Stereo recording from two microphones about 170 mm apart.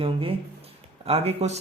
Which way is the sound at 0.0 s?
35° right (ahead or behind).